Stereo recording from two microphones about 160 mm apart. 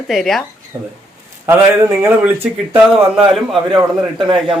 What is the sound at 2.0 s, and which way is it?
Speech, 10° right (ahead or behind).